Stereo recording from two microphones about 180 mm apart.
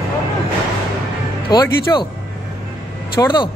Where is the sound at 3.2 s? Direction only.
25° left (ahead or behind).